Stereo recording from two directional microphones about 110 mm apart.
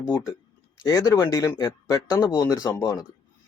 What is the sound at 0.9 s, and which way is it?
Speech, 30° left (ahead or behind).